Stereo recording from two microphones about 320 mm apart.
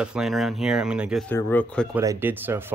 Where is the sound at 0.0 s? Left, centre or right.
Centre.